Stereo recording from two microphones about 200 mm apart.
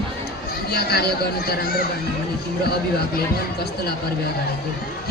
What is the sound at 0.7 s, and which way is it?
Speech, 50° left (ahead or behind).